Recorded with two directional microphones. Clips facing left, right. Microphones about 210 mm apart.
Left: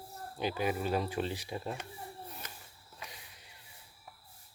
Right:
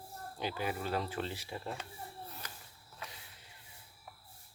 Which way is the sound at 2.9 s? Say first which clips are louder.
Even; 15° left (ahead or behind).